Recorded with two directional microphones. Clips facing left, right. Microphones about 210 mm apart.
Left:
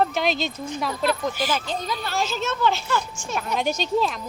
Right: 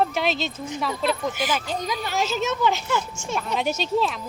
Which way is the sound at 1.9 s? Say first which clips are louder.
Right 2 dB; 15° right (ahead or behind).